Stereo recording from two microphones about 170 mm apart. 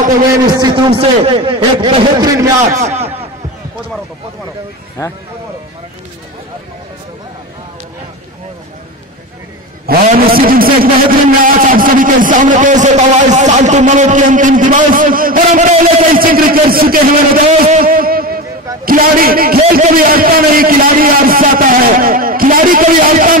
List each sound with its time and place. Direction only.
0.5 s a man's voice: 25° right (ahead or behind)
2.8 s a man's voice: 40° right (ahead or behind)
9.8 s a man's voice: 60° right (ahead or behind)
17.5 s a man's voice: 50° right (ahead or behind)